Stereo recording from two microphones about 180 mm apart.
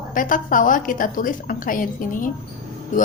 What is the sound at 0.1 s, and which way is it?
A woman's voice, 50° left (ahead or behind).